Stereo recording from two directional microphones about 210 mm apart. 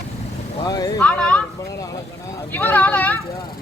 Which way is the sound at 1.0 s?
5° left (ahead or behind).